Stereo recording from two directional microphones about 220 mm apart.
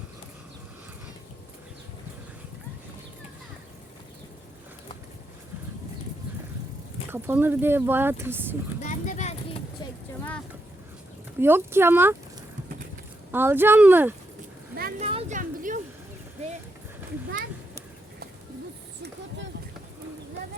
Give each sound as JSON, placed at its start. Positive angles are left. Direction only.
{"t": 7.1, "sound": "speech", "side_deg": -10}
{"t": 8.8, "sound": "a sound", "side_deg": 35}
{"t": 11.3, "sound": "speech", "side_deg": -10}
{"t": 13.3, "sound": "speech", "side_deg": -10}
{"t": 14.8, "sound": "speech", "side_deg": -40}
{"t": 15.0, "sound": "a sound", "side_deg": -30}